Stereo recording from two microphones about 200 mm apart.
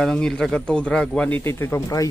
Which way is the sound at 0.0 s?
5° left (ahead or behind).